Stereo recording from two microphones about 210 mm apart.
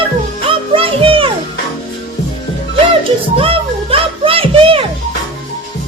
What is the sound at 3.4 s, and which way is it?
Music, 25° right (ahead or behind).